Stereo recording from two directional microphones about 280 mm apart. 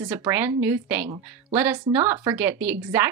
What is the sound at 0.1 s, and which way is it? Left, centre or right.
Speech, centre.